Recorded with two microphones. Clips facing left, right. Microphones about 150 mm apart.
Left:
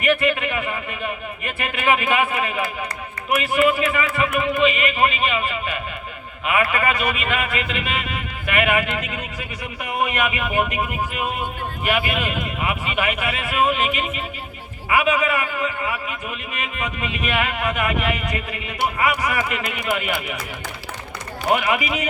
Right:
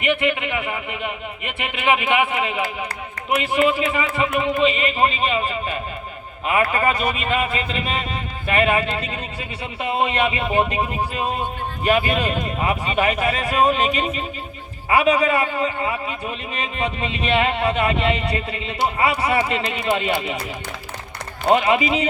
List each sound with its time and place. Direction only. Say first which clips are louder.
0.0 s a man's voice: left 1 dB; 20° right (ahead or behind)
21.4 s a man's voice: right 4 dB; 30° right (ahead or behind)